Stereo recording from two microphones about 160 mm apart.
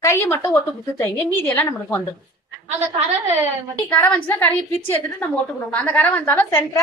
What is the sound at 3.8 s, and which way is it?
A woman's voice, 10° left (ahead or behind).